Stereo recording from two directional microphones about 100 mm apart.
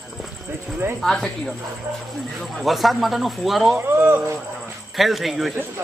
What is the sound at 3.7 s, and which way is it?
Speech, 20° right (ahead or behind).